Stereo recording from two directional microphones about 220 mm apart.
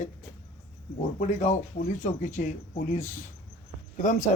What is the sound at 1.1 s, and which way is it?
A man's voice, 35° left (ahead or behind).